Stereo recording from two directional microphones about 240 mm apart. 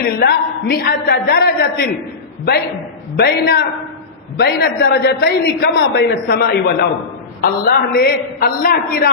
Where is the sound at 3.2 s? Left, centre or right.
Left.